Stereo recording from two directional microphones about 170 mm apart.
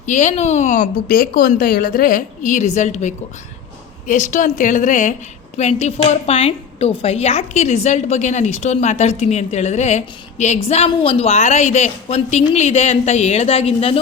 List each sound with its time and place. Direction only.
0.0 s a woman's voice: 45° left (ahead or behind)